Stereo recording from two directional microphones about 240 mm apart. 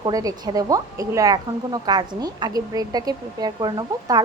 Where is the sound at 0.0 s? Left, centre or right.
Centre.